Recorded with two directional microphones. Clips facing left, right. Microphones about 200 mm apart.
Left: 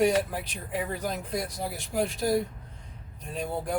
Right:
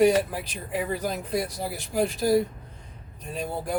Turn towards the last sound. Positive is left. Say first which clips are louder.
# right 1 dB
turn(degrees=-5)  # may be behind; listen again after turning